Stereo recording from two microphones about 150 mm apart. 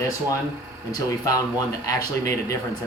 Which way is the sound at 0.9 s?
25° left (ahead or behind).